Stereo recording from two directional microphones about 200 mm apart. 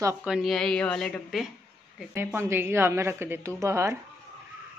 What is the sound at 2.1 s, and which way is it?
A woman's voice, 10° right (ahead or behind).